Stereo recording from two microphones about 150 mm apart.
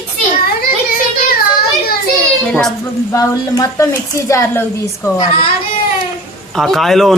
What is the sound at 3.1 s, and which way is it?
Speech, 20° left (ahead or behind).